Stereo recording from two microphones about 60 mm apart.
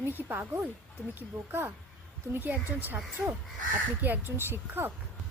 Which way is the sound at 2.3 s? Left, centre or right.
Right.